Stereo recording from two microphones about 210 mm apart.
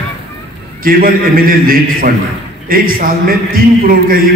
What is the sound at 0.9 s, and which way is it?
Speech, 45° right (ahead or behind).